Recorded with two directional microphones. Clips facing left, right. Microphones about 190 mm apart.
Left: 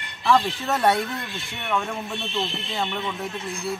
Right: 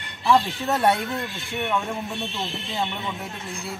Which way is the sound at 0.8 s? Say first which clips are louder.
Left 1 dB; centre (ahead or behind).